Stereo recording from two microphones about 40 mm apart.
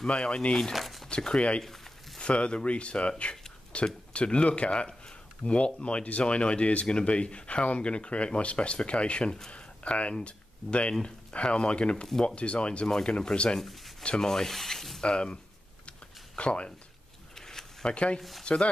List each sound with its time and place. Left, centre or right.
0.0 s speech: left
0.7 s a sound: centre
1.0 s speech: left
9.5 s a sound: left
10.2 s speech: left
13.6 s speech: centre
15.0 s speech: left
16.3 s speech: left
17.4 s a sound: centre
17.8 s speech: left